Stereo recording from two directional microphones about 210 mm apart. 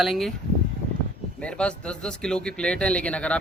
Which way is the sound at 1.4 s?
5° left (ahead or behind).